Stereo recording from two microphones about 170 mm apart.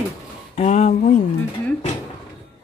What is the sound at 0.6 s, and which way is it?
Speech, 45° left (ahead or behind).